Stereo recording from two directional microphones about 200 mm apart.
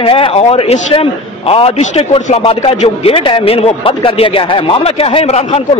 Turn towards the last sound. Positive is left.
turn(degrees=30)  # may be behind; listen again after turning